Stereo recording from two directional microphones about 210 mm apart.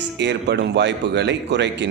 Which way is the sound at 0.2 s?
55° right (ahead or behind).